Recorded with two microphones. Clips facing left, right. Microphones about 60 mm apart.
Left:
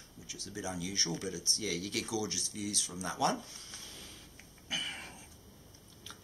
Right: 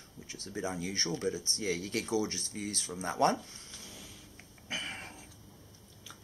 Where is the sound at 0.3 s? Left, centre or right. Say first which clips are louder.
Right 3 dB; right.